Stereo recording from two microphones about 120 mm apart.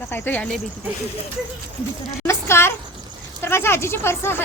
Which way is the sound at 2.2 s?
20° left (ahead or behind).